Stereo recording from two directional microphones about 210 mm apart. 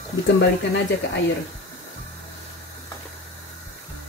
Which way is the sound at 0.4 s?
55° left (ahead or behind).